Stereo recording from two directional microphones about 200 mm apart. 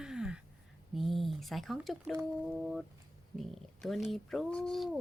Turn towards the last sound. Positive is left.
turn(degrees=0)  # may be behind; listen again after turning